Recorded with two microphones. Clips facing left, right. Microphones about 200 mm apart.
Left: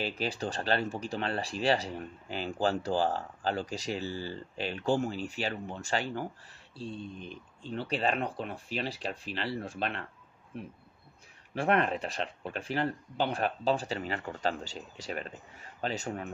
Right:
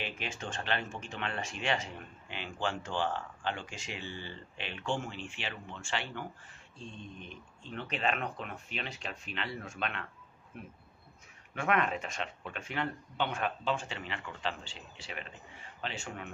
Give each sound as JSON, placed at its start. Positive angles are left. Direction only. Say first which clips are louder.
{"t": 0.0, "sound": "speech", "louder": "left 7 dB", "side_deg": 35}
{"t": 11.5, "sound": "speech", "louder": "left 3 dB", "side_deg": 35}